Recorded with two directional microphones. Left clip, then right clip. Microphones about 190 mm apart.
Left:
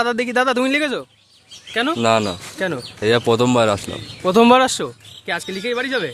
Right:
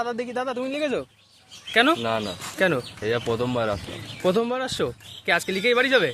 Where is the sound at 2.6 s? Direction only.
30° right (ahead or behind).